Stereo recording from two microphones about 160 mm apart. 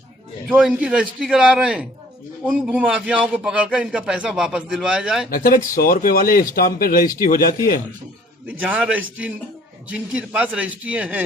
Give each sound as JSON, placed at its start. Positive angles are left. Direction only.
{"t": 0.5, "sound": "a man's voice", "side_deg": -5}
{"t": 5.3, "sound": "speech", "side_deg": 60}
{"t": 8.4, "sound": "a man's voice", "side_deg": -10}